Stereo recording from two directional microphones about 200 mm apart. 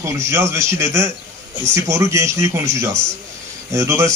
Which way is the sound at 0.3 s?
15° right (ahead or behind).